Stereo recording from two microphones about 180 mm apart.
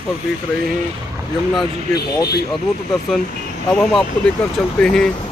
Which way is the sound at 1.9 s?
60° left (ahead or behind).